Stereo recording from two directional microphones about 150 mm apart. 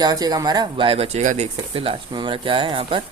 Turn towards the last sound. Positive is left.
turn(degrees=-35)  # may be behind; listen again after turning